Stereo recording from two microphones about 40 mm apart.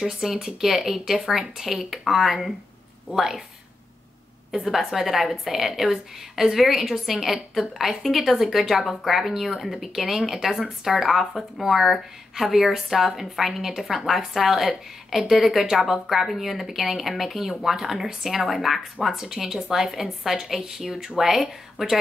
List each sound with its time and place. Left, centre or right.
0.0 s a woman's voice: centre
4.6 s a woman's voice: centre